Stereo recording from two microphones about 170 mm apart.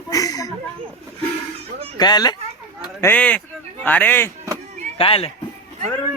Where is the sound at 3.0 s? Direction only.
10° left (ahead or behind).